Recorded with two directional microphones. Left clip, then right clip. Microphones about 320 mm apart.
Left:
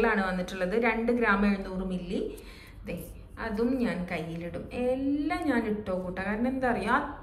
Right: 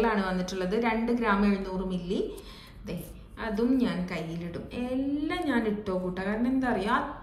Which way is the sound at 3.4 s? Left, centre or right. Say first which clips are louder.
Right 2 dB; centre.